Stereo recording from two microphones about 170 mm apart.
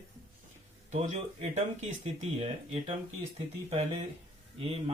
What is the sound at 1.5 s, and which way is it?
Speech, 40° right (ahead or behind).